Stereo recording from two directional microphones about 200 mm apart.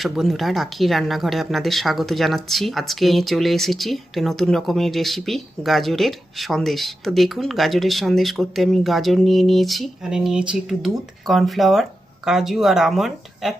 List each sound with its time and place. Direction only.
0.0 s speech: centre (ahead or behind)